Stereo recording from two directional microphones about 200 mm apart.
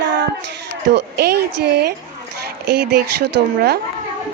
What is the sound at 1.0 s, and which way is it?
Speech, 55° right (ahead or behind).